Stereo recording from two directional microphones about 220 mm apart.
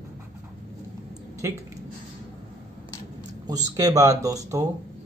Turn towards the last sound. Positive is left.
turn(degrees=-15)  # may be behind; listen again after turning